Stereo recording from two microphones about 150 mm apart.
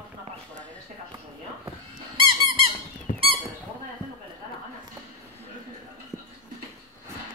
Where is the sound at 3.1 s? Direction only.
55° left (ahead or behind).